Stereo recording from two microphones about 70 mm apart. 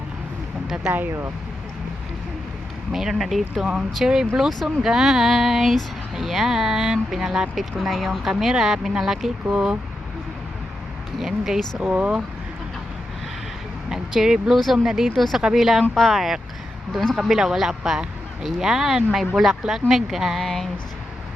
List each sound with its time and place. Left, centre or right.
0.9 s speech: right
2.9 s speech: centre
11.2 s speech: centre
11.8 s speech: centre
13.9 s speech: centre